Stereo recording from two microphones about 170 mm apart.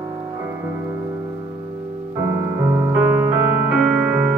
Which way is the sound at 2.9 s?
10° right (ahead or behind).